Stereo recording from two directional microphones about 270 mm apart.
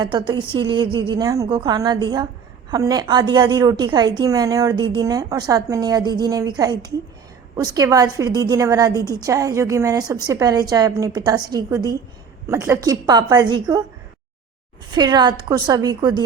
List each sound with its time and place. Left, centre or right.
0.0 s a woman's voice: centre
14.8 s a woman's voice: centre